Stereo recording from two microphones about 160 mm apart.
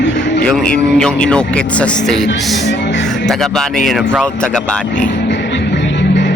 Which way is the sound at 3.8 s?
Centre (ahead or behind).